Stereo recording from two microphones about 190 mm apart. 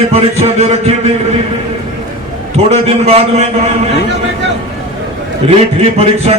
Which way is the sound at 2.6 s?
35° right (ahead or behind).